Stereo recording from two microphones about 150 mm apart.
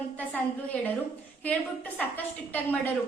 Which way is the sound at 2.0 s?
10° left (ahead or behind).